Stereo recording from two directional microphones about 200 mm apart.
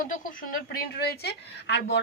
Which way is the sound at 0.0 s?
45° left (ahead or behind).